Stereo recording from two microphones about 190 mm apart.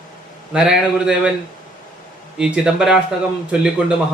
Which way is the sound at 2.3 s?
5° right (ahead or behind).